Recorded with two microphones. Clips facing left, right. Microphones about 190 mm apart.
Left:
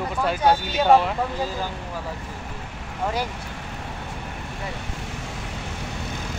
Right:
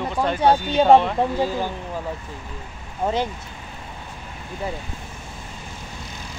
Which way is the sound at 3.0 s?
20° right (ahead or behind).